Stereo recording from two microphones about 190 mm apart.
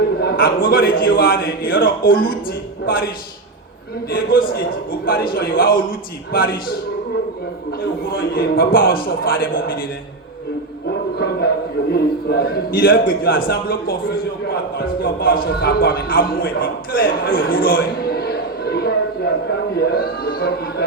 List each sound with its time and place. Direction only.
0.2 s a man's voice: 55° left (ahead or behind)
4.1 s a man's voice: 50° left (ahead or behind)
8.1 s a man's voice: 55° left (ahead or behind)
10.8 s music: 60° left (ahead or behind)
11.9 s a man's voice: 55° left (ahead or behind)